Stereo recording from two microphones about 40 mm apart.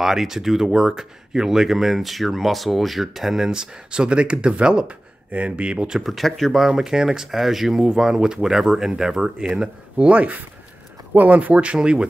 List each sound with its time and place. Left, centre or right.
0.0 s speech: centre; by 5.9 s right
6.0 s speech: centre
6.7 s speech: centre